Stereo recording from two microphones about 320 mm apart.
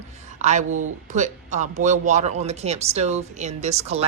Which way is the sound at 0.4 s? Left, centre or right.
Right.